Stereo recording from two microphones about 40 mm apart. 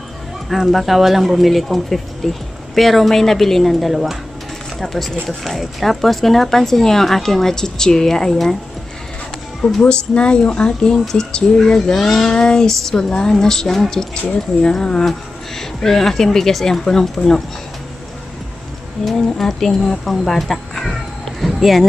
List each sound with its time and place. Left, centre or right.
0.7 s speech: centre
9.8 s a woman's voice: left
19.3 s speech: centre
21.4 s a sound: centre